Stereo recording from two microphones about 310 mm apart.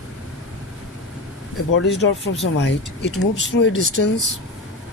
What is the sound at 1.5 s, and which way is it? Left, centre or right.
Speech, left.